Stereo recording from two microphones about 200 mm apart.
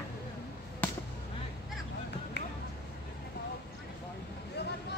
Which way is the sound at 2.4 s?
60° left (ahead or behind).